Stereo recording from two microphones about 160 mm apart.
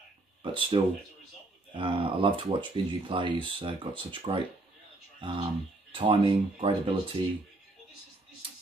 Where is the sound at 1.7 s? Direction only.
35° right (ahead or behind).